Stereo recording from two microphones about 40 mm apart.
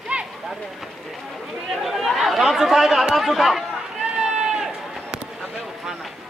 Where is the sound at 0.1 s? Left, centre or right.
Right.